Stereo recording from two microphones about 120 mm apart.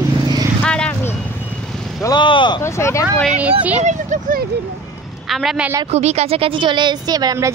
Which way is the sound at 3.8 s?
80° right.